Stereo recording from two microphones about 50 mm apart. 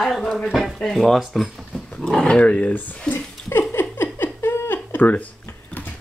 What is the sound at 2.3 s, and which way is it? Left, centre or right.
Speech, left.